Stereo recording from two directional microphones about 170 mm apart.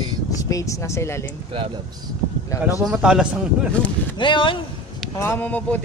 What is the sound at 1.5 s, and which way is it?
Speech, 30° right (ahead or behind).